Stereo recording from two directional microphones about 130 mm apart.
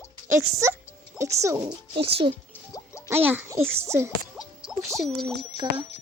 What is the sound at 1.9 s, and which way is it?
Speech, 45° right (ahead or behind).